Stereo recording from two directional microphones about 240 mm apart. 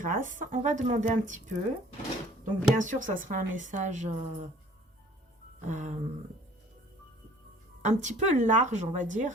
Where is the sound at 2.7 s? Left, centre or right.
Right.